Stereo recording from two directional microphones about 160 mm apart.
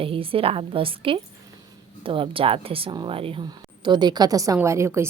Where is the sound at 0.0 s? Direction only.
35° right (ahead or behind).